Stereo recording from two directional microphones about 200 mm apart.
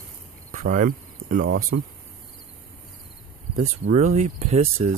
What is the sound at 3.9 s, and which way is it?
Speech, 35° right (ahead or behind).